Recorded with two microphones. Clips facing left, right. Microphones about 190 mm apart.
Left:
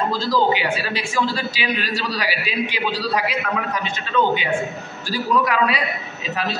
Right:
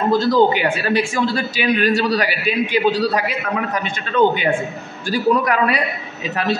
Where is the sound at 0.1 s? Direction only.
55° right (ahead or behind).